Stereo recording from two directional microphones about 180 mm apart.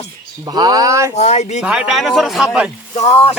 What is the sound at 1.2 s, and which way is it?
Speech, 35° left (ahead or behind).